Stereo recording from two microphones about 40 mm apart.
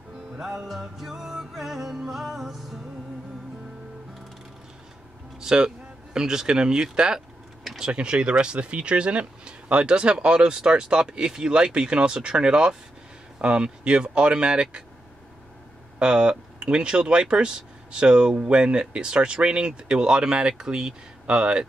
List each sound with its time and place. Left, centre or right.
0.3 s music: centre
0.7 s music: centre
5.4 s a man's voice: centre
16.0 s speech: right